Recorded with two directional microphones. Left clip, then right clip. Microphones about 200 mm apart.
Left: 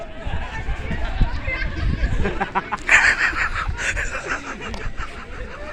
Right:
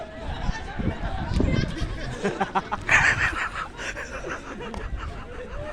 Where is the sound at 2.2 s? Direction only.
70° right (ahead or behind).